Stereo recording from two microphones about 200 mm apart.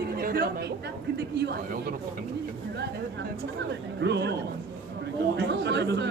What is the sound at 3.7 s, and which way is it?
A man's voice, 60° right (ahead or behind).